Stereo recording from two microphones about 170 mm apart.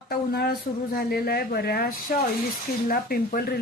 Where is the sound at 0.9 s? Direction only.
60° left (ahead or behind).